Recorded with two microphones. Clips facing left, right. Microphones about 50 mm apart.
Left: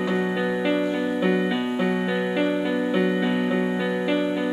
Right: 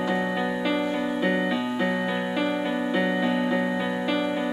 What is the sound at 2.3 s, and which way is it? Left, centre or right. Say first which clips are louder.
Music: left 4 dB; centre.